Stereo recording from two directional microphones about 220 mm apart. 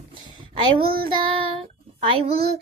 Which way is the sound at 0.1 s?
20° right (ahead or behind).